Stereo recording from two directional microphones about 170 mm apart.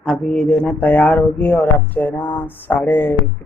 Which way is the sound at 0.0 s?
5° left (ahead or behind).